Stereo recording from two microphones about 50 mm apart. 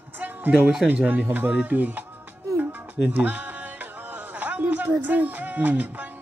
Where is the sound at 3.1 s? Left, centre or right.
Right.